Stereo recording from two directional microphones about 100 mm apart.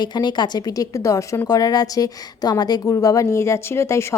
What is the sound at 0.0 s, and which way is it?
A woman's voice, 45° left (ahead or behind).